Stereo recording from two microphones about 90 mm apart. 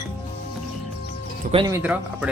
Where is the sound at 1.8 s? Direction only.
15° right (ahead or behind).